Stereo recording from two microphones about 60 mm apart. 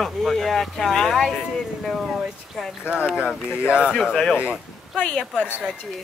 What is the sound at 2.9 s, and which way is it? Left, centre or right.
Speech, centre.